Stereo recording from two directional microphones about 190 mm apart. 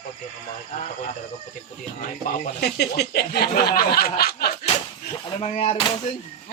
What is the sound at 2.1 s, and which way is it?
Speech, 55° left (ahead or behind).